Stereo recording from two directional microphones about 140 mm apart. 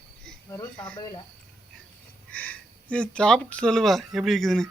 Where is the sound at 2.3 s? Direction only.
10° left (ahead or behind).